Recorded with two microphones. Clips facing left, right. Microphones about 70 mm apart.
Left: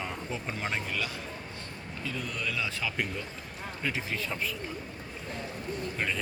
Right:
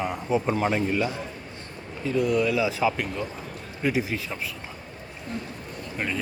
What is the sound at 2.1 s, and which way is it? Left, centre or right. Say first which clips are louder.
A man's voice: right 13 dB; centre.